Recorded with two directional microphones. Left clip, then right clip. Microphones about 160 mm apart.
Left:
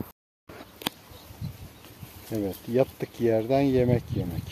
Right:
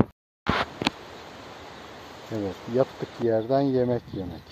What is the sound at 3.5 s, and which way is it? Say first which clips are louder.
Speech: even; 35° left (ahead or behind).